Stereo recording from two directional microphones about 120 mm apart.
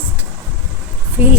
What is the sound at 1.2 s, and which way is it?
Speech, 15° right (ahead or behind).